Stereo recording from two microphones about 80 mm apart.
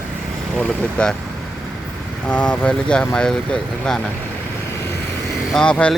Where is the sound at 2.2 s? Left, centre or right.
Centre.